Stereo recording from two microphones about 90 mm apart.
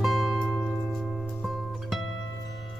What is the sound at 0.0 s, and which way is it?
Music, 5° right (ahead or behind).